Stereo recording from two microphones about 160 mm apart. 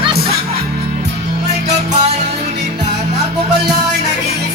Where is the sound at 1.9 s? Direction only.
45° right (ahead or behind).